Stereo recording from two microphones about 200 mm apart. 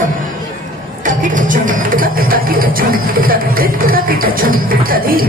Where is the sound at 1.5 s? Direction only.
45° right (ahead or behind).